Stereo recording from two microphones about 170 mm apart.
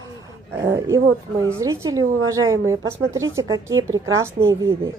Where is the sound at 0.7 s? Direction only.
15° right (ahead or behind).